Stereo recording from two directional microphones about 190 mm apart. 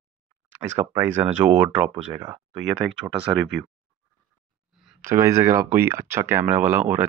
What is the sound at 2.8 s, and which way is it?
Speech, 60° right (ahead or behind).